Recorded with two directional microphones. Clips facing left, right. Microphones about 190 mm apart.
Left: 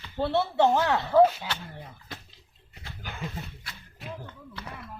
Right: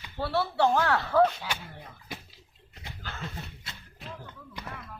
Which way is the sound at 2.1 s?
10° right (ahead or behind).